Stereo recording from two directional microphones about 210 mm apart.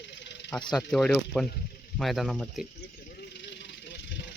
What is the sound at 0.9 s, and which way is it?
Speech, 5° left (ahead or behind).